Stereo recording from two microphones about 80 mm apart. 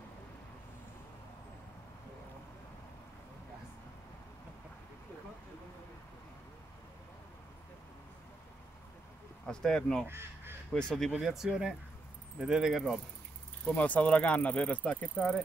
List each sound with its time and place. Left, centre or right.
9.5 s speech: centre
10.0 s speech: right
10.7 s speech: centre
11.1 s speech: centre
13.7 s speech: centre